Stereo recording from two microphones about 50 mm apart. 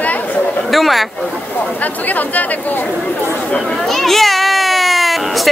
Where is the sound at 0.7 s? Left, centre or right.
Centre.